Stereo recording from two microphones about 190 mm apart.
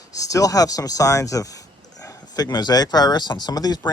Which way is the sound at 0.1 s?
20° left (ahead or behind).